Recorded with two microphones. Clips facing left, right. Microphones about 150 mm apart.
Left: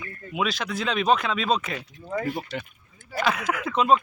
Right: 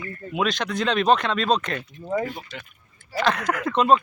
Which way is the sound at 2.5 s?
70° left (ahead or behind).